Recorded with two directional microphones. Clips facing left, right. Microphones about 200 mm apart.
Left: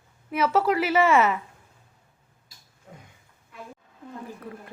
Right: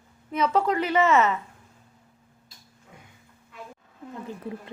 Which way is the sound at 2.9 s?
40° left (ahead or behind).